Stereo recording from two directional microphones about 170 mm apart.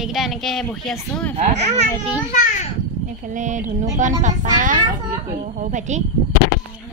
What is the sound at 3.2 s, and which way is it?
Speech, 50° right (ahead or behind).